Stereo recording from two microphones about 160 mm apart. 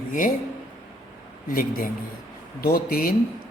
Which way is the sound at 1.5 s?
60° left (ahead or behind).